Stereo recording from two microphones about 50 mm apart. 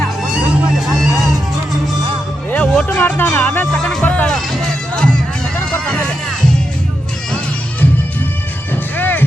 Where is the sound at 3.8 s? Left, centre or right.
Left.